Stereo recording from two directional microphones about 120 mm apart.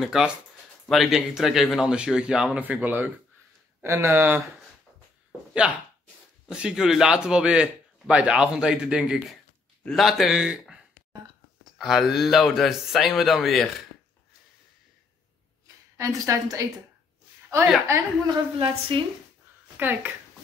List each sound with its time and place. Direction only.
0.0 s speech: 5° right (ahead or behind)
6.4 s speech: 5° right (ahead or behind)
11.8 s speech: centre (ahead or behind)
15.6 s a woman's voice: 30° right (ahead or behind)
17.8 s speech: 25° right (ahead or behind)
18.6 s a woman's voice: 45° right (ahead or behind)
19.8 s speech: 15° right (ahead or behind)